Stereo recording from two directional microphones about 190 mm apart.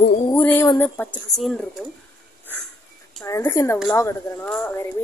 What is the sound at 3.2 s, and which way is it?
Speech, 15° left (ahead or behind).